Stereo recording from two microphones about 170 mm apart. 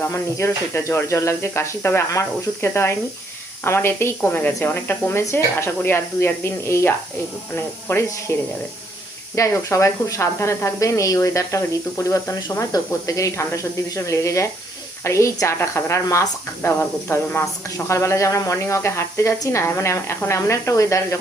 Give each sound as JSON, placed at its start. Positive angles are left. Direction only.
{"t": 0.1, "sound": "speech", "side_deg": 15}